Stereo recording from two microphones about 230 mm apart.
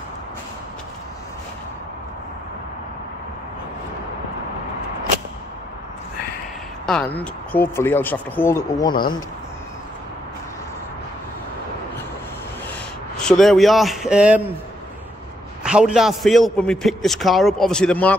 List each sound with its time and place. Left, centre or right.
6.9 s speech: centre
13.2 s a man's voice: centre
15.6 s a man's voice: centre